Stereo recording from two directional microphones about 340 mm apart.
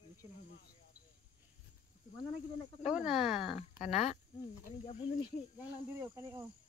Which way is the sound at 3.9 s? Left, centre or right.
Centre.